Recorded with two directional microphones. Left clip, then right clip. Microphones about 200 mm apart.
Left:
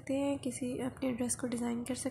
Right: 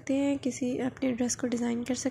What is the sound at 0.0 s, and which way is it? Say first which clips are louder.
A woman's voice: right 5 dB; 15° right (ahead or behind).